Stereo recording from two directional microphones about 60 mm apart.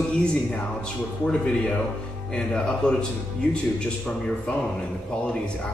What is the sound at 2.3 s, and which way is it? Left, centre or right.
Speech, centre.